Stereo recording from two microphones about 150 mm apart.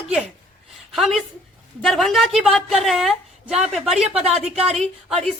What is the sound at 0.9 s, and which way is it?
A woman's voice, centre (ahead or behind).